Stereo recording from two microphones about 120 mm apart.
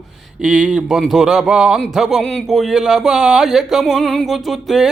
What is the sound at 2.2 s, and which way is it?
Speech, 5° left (ahead or behind).